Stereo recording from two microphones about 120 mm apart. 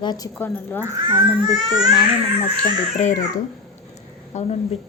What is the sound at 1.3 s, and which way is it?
Speech, 35° right (ahead or behind).